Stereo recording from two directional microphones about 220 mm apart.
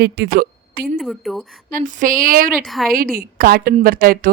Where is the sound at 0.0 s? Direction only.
45° right (ahead or behind).